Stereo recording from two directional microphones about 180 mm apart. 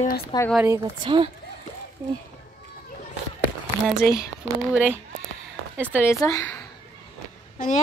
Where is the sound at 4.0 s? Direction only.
20° left (ahead or behind).